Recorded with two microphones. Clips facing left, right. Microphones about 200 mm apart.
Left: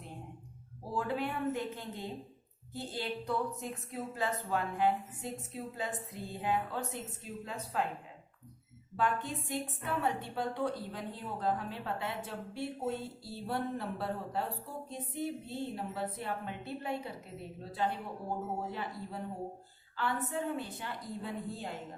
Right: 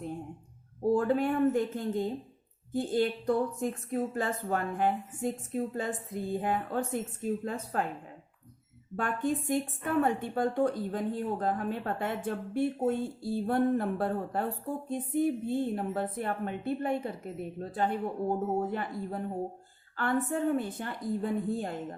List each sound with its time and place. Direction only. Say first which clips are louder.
0.9 s a woman's voice: right 6 dB; 50° right (ahead or behind)
9.0 s a woman's voice: right 4 dB; 50° right (ahead or behind)